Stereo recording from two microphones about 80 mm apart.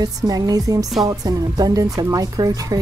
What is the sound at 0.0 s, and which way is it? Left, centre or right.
A woman's voice, right.